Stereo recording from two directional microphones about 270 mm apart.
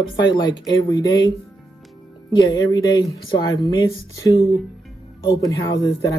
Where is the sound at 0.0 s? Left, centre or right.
Centre.